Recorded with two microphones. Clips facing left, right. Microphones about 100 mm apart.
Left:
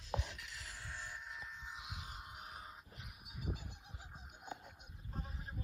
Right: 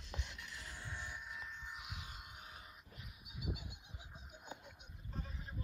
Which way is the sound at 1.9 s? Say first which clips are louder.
Left 1 dB; 35° left (ahead or behind).